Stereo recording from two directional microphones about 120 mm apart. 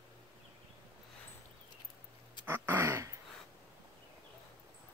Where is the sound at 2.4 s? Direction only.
20° right (ahead or behind).